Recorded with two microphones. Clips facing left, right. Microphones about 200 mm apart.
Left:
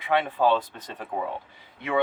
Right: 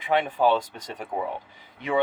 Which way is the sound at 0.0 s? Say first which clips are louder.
Right 1 dB; 15° right (ahead or behind).